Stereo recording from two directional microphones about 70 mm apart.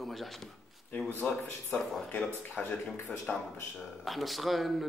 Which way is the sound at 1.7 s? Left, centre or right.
Centre.